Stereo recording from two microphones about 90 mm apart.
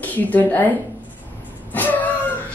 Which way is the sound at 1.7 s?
20° left (ahead or behind).